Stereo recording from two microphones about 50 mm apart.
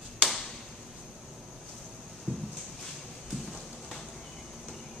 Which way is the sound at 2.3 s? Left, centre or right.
Left.